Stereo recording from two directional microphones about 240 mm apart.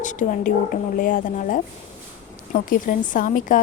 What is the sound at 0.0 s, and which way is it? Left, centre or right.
A woman's voice, left.